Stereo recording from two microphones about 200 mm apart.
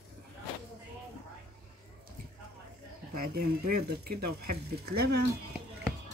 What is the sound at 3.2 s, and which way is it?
Speech, 50° right (ahead or behind).